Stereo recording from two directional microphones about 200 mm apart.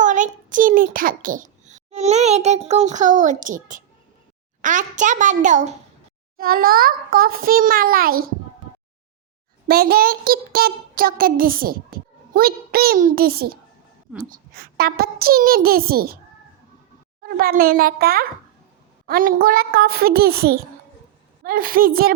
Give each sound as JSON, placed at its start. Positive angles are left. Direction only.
{"t": 0.0, "sound": "a child's voice", "side_deg": -40}
{"t": 6.3, "sound": "child singing", "side_deg": -45}
{"t": 9.6, "sound": "child singing", "side_deg": -50}
{"t": 17.2, "sound": "a child's voice", "side_deg": -50}
{"t": 17.6, "sound": "child singing", "side_deg": -45}